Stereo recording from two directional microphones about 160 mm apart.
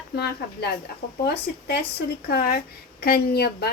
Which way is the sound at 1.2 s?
90° left.